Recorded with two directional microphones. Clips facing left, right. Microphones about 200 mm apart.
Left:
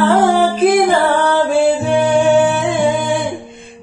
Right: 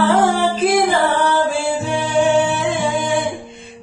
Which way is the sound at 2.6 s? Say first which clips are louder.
Left 4 dB; 55° left (ahead or behind).